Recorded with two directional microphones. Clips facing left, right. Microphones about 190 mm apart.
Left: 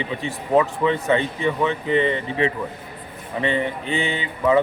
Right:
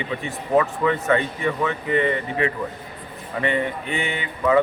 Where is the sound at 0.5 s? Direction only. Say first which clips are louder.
Left 1 dB; 25° left (ahead or behind).